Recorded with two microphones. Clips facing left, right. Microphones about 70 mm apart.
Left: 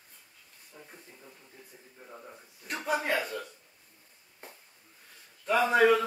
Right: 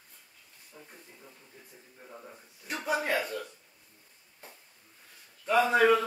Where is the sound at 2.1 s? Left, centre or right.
Centre.